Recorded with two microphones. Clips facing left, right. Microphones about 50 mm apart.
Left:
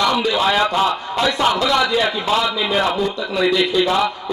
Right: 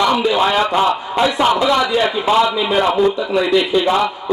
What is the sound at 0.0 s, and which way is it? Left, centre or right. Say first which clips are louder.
A man's voice: right 3 dB; centre.